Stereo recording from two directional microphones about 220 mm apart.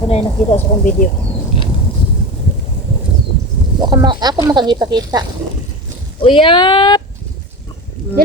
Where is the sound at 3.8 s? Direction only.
20° right (ahead or behind).